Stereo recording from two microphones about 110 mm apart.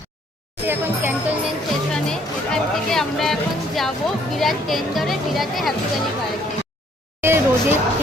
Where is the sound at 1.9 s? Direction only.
5° left (ahead or behind).